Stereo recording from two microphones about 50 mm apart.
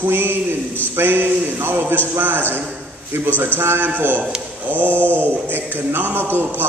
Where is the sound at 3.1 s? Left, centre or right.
Right.